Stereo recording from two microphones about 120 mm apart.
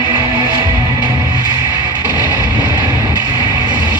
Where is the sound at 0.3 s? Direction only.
35° right (ahead or behind).